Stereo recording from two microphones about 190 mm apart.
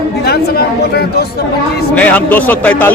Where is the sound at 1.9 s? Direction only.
5° left (ahead or behind).